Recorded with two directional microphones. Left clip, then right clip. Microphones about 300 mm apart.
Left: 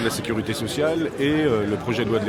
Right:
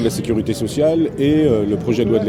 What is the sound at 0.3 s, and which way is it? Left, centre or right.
Speech, right.